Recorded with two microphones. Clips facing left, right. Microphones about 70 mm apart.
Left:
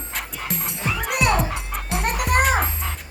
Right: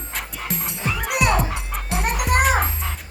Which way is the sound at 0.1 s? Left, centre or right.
Centre.